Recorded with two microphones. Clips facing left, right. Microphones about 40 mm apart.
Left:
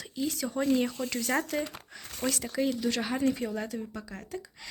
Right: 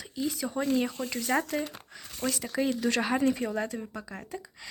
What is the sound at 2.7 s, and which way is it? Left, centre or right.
Speech, right.